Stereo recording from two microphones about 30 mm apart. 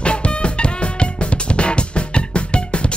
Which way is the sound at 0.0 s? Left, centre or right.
Left.